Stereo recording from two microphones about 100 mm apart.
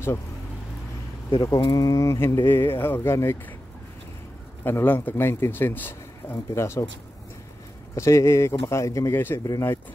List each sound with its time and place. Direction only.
1.4 s speech: 35° left (ahead or behind)
4.6 s speech: 20° left (ahead or behind)
7.9 s speech: 30° left (ahead or behind)
9.4 s speech: 35° left (ahead or behind)